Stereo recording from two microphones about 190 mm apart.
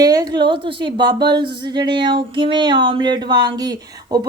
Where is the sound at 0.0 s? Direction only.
20° right (ahead or behind).